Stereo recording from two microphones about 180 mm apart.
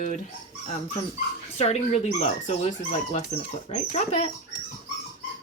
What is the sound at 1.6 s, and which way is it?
Speech, 35° left (ahead or behind).